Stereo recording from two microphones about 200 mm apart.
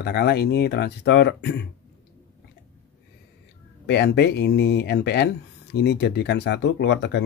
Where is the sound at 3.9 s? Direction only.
55° left (ahead or behind).